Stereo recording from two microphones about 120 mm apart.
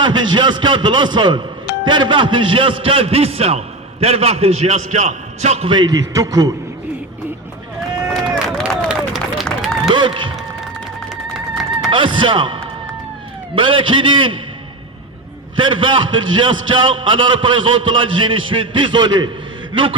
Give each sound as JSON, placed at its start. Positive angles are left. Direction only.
{"t": 0.0, "sound": "a man's voice", "side_deg": -40}
{"t": 5.6, "sound": "speech", "side_deg": -40}
{"t": 8.0, "sound": "run", "side_deg": 0}
{"t": 9.9, "sound": "speech", "side_deg": -40}
{"t": 11.3, "sound": "run", "side_deg": 0}
{"t": 11.9, "sound": "a man's voice", "side_deg": -45}
{"t": 15.5, "sound": "a man's voice", "side_deg": -45}